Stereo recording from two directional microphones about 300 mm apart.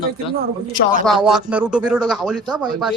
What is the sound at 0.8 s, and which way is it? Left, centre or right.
Speech, left.